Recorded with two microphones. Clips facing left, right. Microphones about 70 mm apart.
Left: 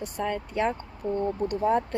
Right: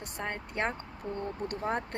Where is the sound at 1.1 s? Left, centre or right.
Left.